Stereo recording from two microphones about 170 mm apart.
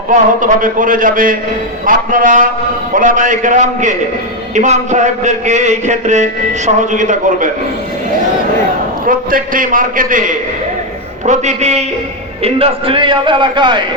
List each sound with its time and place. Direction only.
0.1 s a man's voice: 50° right (ahead or behind)
9.0 s a man's voice: 55° right (ahead or behind); by 13.8 s 25° right (ahead or behind)